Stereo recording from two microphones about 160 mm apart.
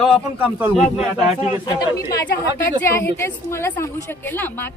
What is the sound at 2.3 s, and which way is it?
Speech, 75° left (ahead or behind).